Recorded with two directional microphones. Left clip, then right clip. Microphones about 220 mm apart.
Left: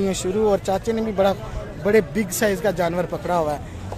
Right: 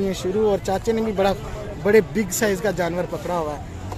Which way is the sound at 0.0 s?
5° left (ahead or behind).